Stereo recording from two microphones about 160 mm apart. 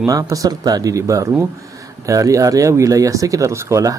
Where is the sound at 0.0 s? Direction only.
20° right (ahead or behind).